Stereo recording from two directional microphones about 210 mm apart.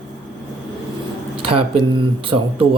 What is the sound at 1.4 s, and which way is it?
Speech, 25° right (ahead or behind).